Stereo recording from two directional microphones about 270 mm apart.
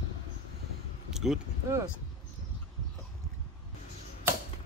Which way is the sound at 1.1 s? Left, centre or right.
Centre.